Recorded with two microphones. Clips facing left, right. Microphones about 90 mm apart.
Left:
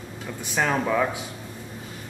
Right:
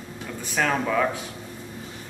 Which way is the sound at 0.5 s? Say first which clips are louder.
Even; 10° left (ahead or behind).